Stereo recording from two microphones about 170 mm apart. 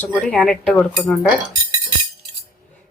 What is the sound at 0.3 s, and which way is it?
Speech, 5° left (ahead or behind).